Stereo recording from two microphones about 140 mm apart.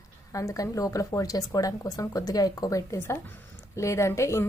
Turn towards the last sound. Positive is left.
turn(degrees=20)  # may be behind; listen again after turning